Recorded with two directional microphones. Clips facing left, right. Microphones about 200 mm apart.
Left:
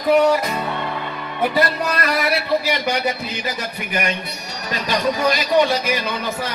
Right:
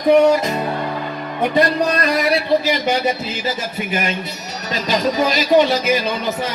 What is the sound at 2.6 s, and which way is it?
Speech, 20° right (ahead or behind).